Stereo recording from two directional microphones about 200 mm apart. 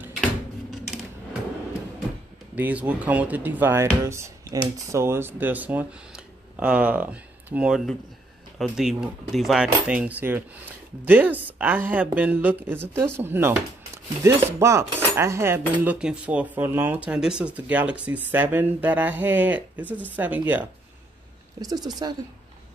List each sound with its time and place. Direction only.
2.5 s speech: 5° right (ahead or behind)
21.5 s speech: 20° right (ahead or behind)